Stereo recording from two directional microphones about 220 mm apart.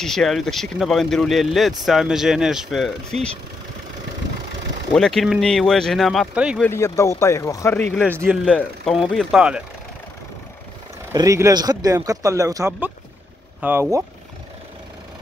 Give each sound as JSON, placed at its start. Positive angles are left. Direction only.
{"t": 0.0, "sound": "speech", "side_deg": 0}
{"t": 4.9, "sound": "speech", "side_deg": 0}
{"t": 6.6, "sound": "speech", "side_deg": 10}
{"t": 8.0, "sound": "speech", "side_deg": -10}
{"t": 8.5, "sound": "speech", "side_deg": 5}
{"t": 11.1, "sound": "speech", "side_deg": -15}